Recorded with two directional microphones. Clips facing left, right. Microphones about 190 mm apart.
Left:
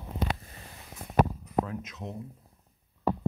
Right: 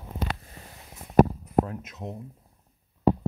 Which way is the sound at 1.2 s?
45° right (ahead or behind).